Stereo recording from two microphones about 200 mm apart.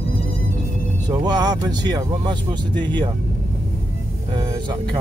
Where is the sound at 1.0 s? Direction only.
20° right (ahead or behind).